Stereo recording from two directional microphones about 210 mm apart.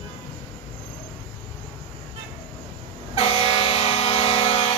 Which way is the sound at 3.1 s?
30° left (ahead or behind).